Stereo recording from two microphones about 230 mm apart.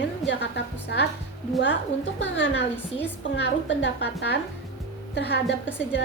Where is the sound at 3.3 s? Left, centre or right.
Left.